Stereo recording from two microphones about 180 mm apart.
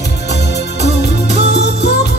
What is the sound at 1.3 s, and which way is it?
Music, 70° left (ahead or behind).